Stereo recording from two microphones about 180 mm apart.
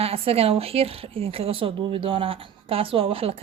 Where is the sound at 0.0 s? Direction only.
35° right (ahead or behind).